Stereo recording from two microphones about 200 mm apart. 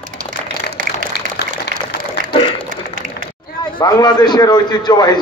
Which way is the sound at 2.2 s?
40° right (ahead or behind).